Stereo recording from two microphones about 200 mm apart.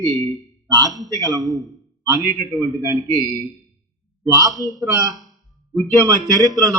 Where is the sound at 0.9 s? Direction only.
Centre (ahead or behind).